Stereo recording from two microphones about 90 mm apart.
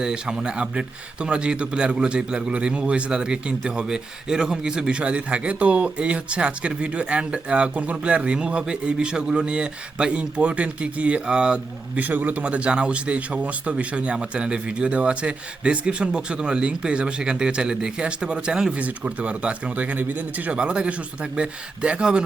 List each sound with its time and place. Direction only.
0.0 s speech: 10° right (ahead or behind)